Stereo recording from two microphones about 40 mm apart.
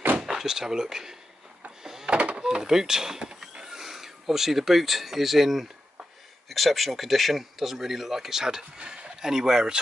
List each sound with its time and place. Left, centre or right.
0.2 s speech: centre
1.8 s a sound: centre
2.0 s door: right
2.4 s speech: centre
9.2 s speech: centre